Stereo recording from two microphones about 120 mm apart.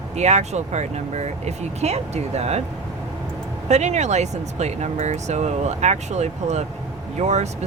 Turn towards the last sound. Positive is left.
turn(degrees=-70)  # may be behind; listen again after turning